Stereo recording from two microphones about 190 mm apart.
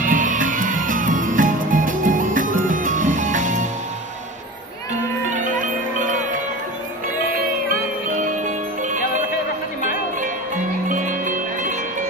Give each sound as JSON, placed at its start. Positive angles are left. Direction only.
{"t": 0.0, "sound": "music", "side_deg": -45}
{"t": 5.3, "sound": "music", "side_deg": -45}
{"t": 8.1, "sound": "music", "side_deg": -45}
{"t": 10.2, "sound": "music", "side_deg": -45}